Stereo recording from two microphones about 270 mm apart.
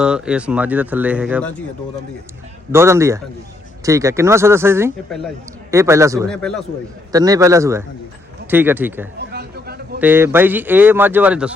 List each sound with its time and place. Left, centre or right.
0.0 s speech: centre
2.7 s speech: centre
6.3 s speech: centre
7.1 s speech: centre
9.1 s a sound: right
10.0 s speech: centre